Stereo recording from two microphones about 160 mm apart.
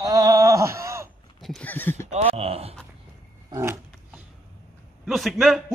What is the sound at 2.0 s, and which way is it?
Speech, 35° right (ahead or behind).